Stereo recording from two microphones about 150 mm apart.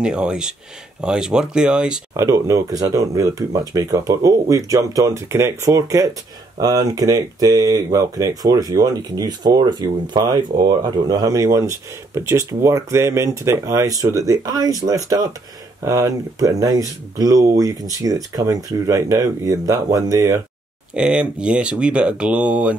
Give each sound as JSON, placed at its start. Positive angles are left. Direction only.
{"t": 0.0, "sound": "speech", "side_deg": -5}
{"t": 2.1, "sound": "speech", "side_deg": -20}
{"t": 20.9, "sound": "speech", "side_deg": -5}